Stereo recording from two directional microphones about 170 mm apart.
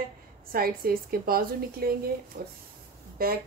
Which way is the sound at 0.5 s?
60° right (ahead or behind).